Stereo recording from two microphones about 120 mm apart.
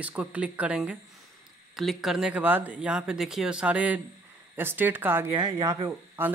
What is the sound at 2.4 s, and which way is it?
Speech, 15° right (ahead or behind).